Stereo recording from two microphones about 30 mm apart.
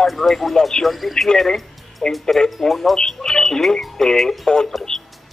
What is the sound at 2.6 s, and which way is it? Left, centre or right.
Speech, centre.